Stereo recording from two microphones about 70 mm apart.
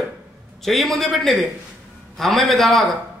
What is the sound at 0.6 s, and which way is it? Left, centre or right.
A man's voice, centre.